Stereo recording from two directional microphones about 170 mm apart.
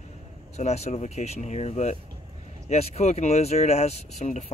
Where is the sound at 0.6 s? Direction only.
40° left (ahead or behind).